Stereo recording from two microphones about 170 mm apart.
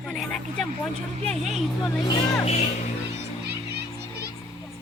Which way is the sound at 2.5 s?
45° left (ahead or behind).